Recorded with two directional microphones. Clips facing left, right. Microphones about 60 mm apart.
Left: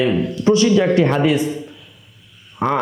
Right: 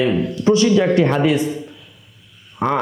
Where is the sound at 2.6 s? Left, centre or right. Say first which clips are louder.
Even; left.